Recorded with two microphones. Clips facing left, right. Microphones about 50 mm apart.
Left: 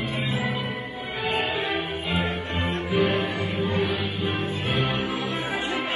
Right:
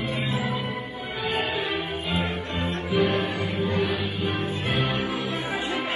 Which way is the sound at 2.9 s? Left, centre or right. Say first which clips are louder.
Even; left.